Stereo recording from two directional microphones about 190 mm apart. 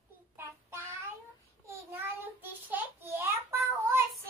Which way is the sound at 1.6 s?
10° right (ahead or behind).